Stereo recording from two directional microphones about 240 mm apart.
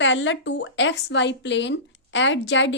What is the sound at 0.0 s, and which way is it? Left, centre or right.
A woman's voice, left.